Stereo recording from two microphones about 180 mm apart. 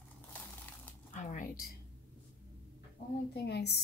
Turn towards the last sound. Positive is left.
turn(degrees=65)  # may be behind; listen again after turning